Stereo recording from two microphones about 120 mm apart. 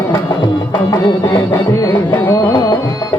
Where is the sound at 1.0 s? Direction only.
30° left (ahead or behind).